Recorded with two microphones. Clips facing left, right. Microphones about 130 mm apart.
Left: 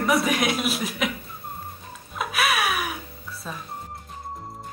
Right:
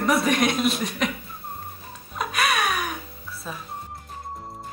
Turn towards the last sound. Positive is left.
turn(degrees=0)  # may be behind; listen again after turning